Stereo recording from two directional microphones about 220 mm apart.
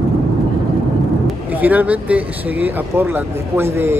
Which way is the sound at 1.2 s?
5° right (ahead or behind).